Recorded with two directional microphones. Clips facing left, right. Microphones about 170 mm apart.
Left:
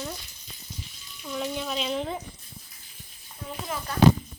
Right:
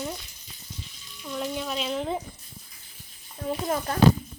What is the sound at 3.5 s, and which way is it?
Speech, 40° right (ahead or behind).